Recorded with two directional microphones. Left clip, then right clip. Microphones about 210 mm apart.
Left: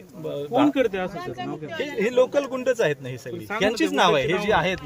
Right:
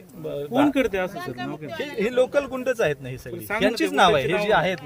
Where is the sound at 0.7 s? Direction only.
55° right (ahead or behind).